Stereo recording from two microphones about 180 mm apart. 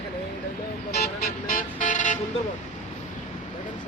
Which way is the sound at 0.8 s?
55° left (ahead or behind).